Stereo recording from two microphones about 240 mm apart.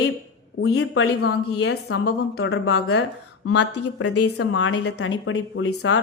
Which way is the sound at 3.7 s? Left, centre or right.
Left.